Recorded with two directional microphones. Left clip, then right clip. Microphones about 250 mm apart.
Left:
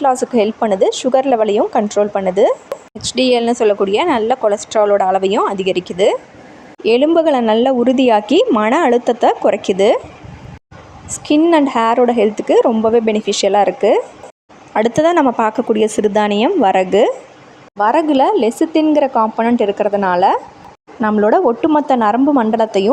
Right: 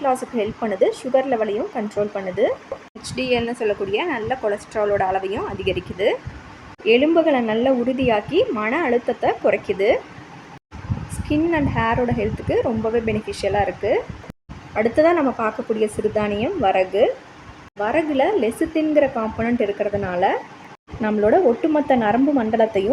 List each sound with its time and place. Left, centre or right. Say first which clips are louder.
0.0 s a woman's voice: left 8 dB; left
6.8 s a woman's voice: left 4 dB; left
11.3 s a woman's voice: left 9 dB; left